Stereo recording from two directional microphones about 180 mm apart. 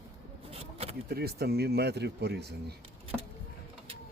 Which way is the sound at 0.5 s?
35° right (ahead or behind).